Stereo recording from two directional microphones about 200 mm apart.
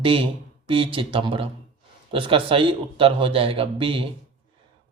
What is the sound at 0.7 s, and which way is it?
A man's voice, 25° right (ahead or behind).